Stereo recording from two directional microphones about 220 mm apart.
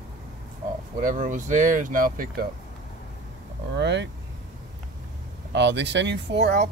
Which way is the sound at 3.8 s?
50° right (ahead or behind).